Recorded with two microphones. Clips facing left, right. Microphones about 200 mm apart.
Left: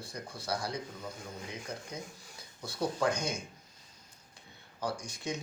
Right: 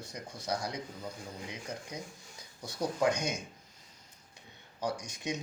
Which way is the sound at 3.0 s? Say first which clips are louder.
Right 3 dB; 20° right (ahead or behind).